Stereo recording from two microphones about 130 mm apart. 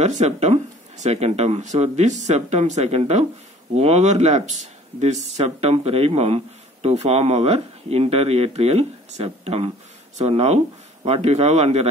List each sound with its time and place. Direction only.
0.0 s speech: 60° right (ahead or behind)